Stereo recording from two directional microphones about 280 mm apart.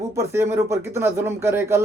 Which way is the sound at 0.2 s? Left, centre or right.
Centre.